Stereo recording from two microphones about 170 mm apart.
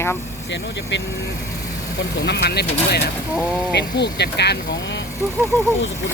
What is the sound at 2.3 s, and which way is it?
Speech, 70° left (ahead or behind).